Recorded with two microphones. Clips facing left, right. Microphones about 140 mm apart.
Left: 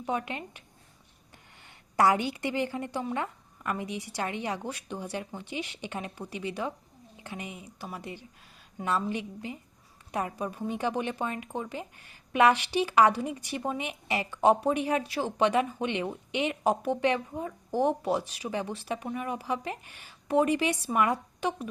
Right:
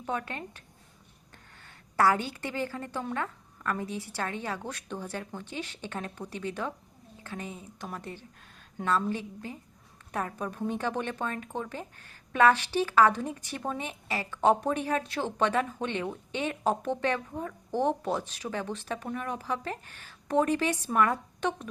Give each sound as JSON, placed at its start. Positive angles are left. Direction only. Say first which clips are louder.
{"t": 0.0, "sound": "a woman's voice", "louder": "left 2 dB", "side_deg": 15}
{"t": 1.6, "sound": "a woman's voice", "louder": "left 1 dB", "side_deg": 15}